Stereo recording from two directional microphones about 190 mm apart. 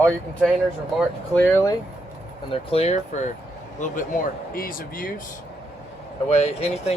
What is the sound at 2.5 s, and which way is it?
Speech, 30° left (ahead or behind).